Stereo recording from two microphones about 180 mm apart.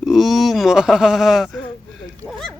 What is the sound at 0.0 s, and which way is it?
Speech, centre (ahead or behind).